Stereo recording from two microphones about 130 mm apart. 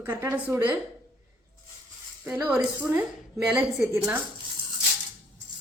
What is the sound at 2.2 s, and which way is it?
A woman's voice, 5° right (ahead or behind).